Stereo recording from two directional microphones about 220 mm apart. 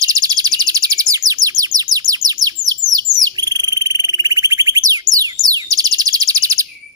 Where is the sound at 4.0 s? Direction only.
15° right (ahead or behind).